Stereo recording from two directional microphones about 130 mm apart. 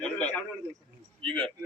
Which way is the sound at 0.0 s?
10° left (ahead or behind).